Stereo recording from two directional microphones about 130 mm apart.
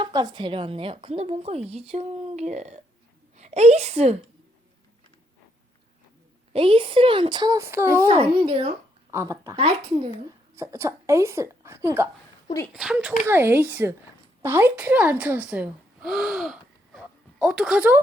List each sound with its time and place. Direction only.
0.0 s a woman's voice: 30° right (ahead or behind); by 4.2 s 55° right (ahead or behind)
6.5 s a woman's voice: 45° right (ahead or behind)
7.6 s speech: 15° right (ahead or behind)
8.1 s speech: 45° right (ahead or behind)
9.0 s speech: 20° right (ahead or behind)
9.6 s speech: 45° right (ahead or behind)
10.5 s speech: 20° right (ahead or behind)
12.7 s speech: 5° right (ahead or behind)
13.2 s speech: 15° right (ahead or behind)